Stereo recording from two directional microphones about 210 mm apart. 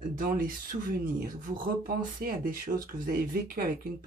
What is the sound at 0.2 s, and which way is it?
Speech, 40° right (ahead or behind).